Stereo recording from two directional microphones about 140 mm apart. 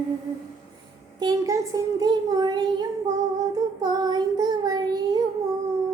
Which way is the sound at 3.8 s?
30° right (ahead or behind).